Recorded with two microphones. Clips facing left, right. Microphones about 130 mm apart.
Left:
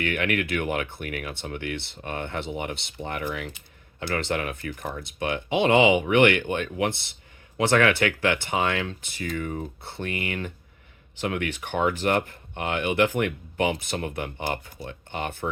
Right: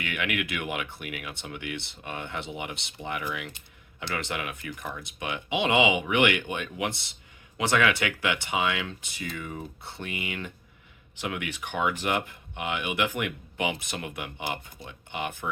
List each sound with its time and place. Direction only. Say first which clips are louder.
0.0 s speech: left 5 dB; 40° left (ahead or behind)